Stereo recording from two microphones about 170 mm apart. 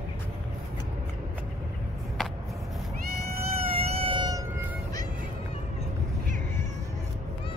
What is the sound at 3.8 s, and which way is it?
Cat, 35° right (ahead or behind).